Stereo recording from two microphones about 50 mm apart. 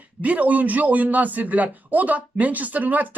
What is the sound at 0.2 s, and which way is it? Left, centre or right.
A man's voice, right.